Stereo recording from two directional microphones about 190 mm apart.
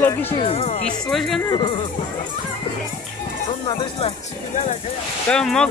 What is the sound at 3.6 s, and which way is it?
Speech, 25° left (ahead or behind).